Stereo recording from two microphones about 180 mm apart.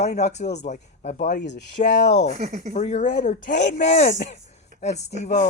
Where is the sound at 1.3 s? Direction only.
70° left (ahead or behind).